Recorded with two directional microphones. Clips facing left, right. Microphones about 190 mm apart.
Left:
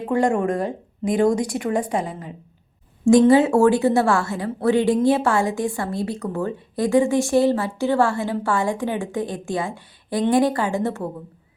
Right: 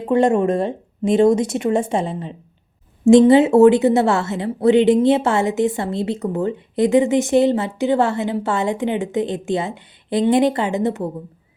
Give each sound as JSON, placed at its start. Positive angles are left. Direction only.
{"t": 0.1, "sound": "a woman's voice", "side_deg": -20}